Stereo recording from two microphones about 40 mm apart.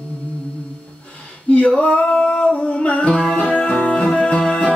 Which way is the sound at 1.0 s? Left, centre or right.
Left.